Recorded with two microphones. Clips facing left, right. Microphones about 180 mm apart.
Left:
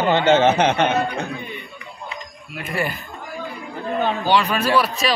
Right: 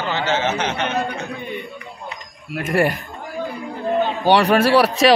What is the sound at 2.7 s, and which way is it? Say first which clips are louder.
Speech: right 7 dB; 80° right.